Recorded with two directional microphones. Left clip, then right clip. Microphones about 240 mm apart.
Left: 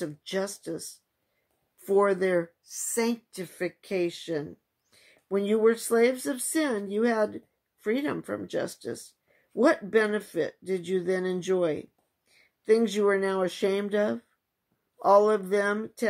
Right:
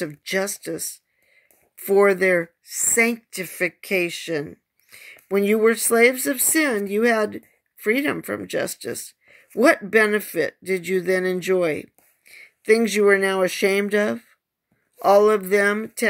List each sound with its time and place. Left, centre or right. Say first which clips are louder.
0.0 s speech: right 7 dB; right
1.9 s speech: right 7 dB; right
4.2 s a sound: right 6 dB; right
5.9 s speech: right 7 dB; right